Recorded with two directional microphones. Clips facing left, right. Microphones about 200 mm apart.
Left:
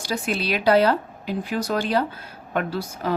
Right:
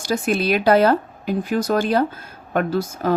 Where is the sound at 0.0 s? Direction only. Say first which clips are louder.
Right 5 dB; 50° right (ahead or behind).